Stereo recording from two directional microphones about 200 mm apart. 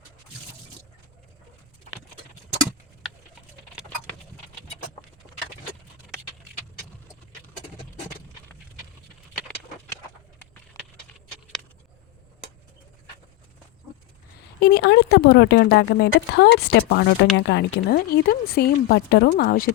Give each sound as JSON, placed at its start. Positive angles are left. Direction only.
{"t": 14.6, "sound": "a woman's voice", "side_deg": 55}